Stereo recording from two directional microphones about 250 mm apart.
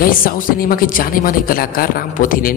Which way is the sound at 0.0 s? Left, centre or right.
Left.